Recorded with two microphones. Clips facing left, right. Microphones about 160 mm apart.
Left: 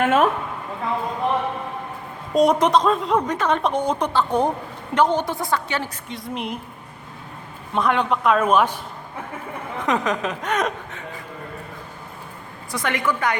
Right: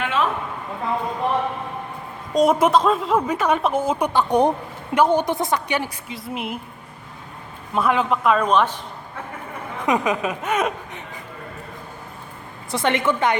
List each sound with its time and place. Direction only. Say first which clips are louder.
0.0 s a sound: left 5 dB; 50° left (ahead or behind)
2.3 s a woman's voice: even; centre (ahead or behind)
6.1 s a man's voice: even; 5° right (ahead or behind)
7.7 s a man's voice: right 1 dB; 5° right (ahead or behind)
9.8 s a woman's voice: right 2 dB; 10° right (ahead or behind)
12.7 s a woman's voice: right 3 dB; 25° right (ahead or behind)